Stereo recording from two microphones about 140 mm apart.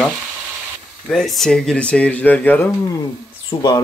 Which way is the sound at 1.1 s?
Centre (ahead or behind).